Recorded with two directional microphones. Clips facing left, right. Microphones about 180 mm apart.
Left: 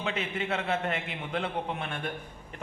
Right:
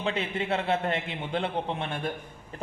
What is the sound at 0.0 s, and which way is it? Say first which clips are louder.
A man's voice: right 3 dB; 30° right (ahead or behind).